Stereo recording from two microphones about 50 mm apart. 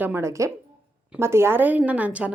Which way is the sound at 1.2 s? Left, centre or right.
Right.